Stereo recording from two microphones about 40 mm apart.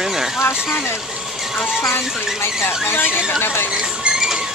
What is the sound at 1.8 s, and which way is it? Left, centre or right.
Speech, left.